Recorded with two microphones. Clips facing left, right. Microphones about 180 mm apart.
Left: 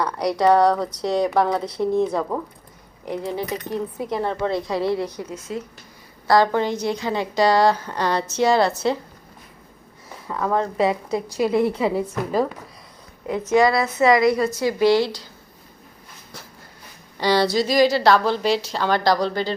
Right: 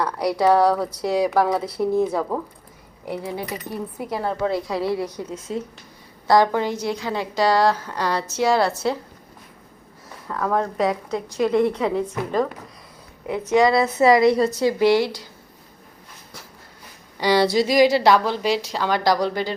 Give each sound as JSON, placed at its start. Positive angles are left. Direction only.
{"t": 0.0, "sound": "a woman's voice", "side_deg": -5}
{"t": 3.4, "sound": "a woman's voice", "side_deg": -5}
{"t": 5.0, "sound": "a woman's voice", "side_deg": -25}
{"t": 6.2, "sound": "a woman's voice", "side_deg": -20}
{"t": 6.5, "sound": "a woman's voice", "side_deg": -10}
{"t": 10.2, "sound": "a woman's voice", "side_deg": 0}
{"t": 13.2, "sound": "a woman's voice", "side_deg": -10}
{"t": 13.8, "sound": "a woman's voice", "side_deg": -30}
{"t": 17.2, "sound": "a woman's voice", "side_deg": -15}